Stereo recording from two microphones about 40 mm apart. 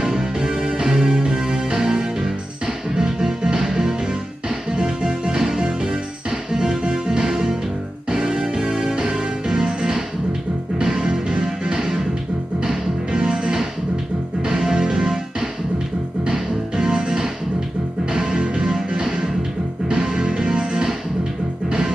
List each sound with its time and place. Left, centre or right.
0.0 s music: centre
16.3 s music: centre